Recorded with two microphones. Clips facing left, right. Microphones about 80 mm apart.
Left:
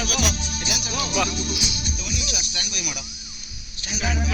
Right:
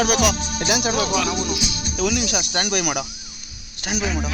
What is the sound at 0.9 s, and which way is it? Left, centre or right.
Speech, right.